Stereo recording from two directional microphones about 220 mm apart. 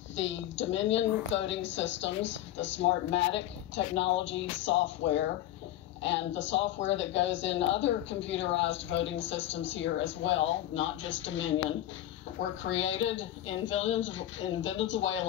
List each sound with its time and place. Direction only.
0.1 s a woman's voice: 55° left (ahead or behind)
13.1 s a woman's voice: 60° left (ahead or behind)